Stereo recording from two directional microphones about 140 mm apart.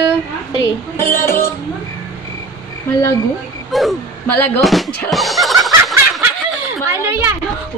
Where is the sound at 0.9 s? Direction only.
20° left (ahead or behind).